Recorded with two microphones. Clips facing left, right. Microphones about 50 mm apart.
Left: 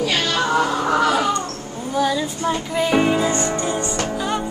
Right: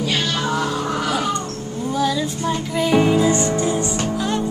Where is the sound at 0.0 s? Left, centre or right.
Left.